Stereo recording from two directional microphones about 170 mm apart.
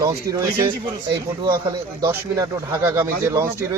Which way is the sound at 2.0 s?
15° right (ahead or behind).